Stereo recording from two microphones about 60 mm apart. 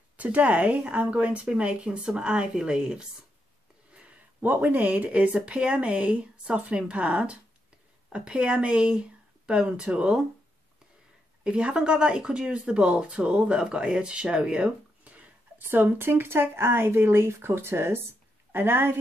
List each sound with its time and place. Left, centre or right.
0.2 s speech: right
4.4 s speech: right
11.4 s speech: centre
15.0 s a sound: right
15.6 s speech: right